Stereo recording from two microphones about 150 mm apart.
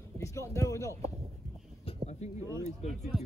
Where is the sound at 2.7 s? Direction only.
50° left (ahead or behind).